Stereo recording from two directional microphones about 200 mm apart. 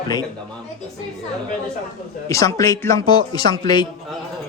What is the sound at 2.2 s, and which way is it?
Speech, 15° left (ahead or behind).